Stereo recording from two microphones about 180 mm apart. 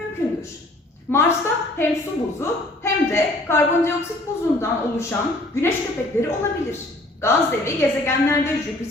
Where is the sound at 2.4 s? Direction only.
15° left (ahead or behind).